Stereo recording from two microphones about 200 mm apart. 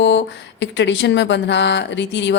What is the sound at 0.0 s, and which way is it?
Speech, 60° left (ahead or behind).